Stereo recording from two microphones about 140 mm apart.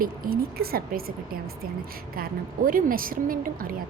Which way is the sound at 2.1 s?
85° right.